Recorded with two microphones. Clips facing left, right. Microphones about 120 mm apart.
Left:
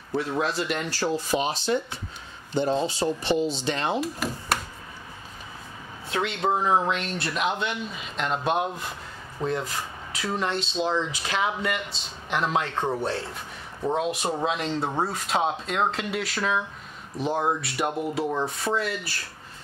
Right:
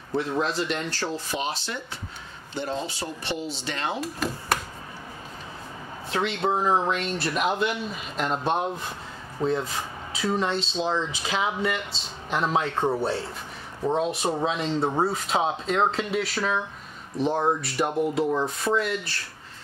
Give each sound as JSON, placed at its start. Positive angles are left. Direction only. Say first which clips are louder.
{"t": 0.1, "sound": "speech", "louder": "even", "side_deg": 5}
{"t": 6.0, "sound": "speech", "louder": "even", "side_deg": 0}